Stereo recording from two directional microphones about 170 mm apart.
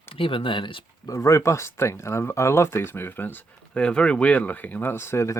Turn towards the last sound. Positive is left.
turn(degrees=15)  # may be behind; listen again after turning